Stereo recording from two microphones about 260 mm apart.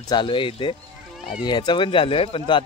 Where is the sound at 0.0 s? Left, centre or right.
Centre.